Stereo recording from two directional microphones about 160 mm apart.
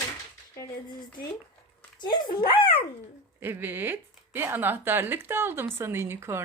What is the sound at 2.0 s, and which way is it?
Speech, 30° left (ahead or behind).